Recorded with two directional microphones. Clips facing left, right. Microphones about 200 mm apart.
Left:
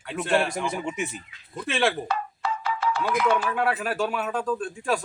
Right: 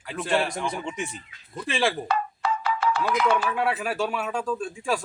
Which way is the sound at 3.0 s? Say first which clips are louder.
Left 2 dB; centre (ahead or behind).